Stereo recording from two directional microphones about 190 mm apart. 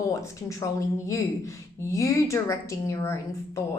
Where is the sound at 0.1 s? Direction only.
15° left (ahead or behind).